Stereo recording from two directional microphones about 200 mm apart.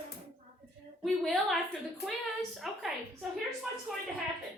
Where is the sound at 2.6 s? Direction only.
Centre (ahead or behind).